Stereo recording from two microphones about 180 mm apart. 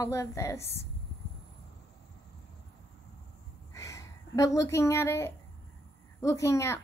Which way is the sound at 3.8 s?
20° left (ahead or behind).